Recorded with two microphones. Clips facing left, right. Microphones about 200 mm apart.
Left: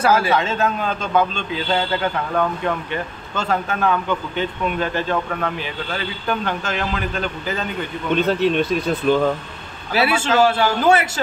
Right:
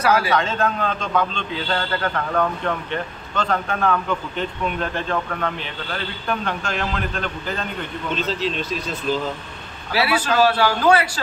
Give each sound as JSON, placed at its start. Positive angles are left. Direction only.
{"t": 0.0, "sound": "a man's voice", "side_deg": 25}
{"t": 0.6, "sound": "a man's voice", "side_deg": 5}
{"t": 6.2, "sound": "a man's voice", "side_deg": 5}
{"t": 8.1, "sound": "speech", "side_deg": 60}
{"t": 9.9, "sound": "a man's voice", "side_deg": 25}